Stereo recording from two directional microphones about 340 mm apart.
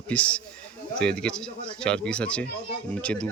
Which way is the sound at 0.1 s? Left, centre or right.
Centre.